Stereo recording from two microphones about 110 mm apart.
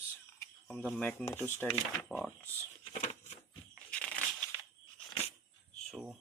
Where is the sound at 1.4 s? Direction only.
20° left (ahead or behind).